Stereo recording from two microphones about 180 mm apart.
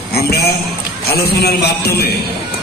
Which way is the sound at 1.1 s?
60° left (ahead or behind).